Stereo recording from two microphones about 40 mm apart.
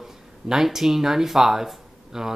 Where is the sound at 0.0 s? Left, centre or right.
Centre.